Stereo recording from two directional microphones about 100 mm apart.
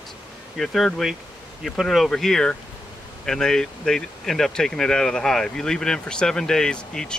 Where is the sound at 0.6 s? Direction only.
Centre (ahead or behind).